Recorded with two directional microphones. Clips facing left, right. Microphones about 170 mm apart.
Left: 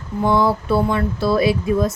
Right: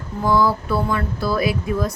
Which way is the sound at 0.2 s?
25° left (ahead or behind).